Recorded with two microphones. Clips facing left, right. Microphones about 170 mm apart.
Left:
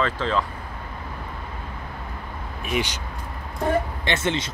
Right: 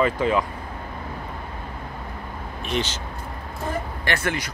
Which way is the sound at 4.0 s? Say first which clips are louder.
Left 1 dB; 20° left (ahead or behind).